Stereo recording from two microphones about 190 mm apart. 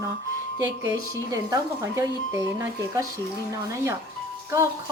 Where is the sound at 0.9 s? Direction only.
20° right (ahead or behind).